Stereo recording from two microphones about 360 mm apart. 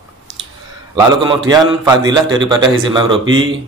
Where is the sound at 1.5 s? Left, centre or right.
Centre.